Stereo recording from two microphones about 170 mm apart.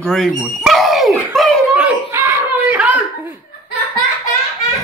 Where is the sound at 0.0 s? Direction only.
Centre (ahead or behind).